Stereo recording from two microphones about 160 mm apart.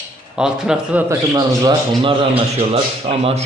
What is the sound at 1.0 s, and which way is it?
A man's voice, 25° right (ahead or behind).